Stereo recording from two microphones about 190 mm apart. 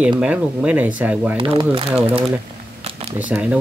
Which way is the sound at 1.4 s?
25° right (ahead or behind).